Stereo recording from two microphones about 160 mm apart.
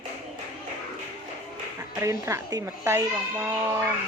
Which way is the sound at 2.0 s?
15° right (ahead or behind).